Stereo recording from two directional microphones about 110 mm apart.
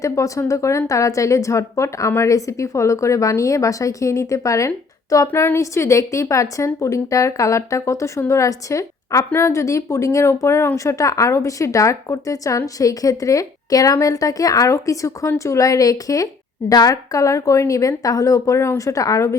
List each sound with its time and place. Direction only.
0.0 s speech: 30° left (ahead or behind)